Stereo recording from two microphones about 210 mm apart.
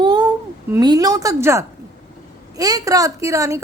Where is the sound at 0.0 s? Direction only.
20° right (ahead or behind).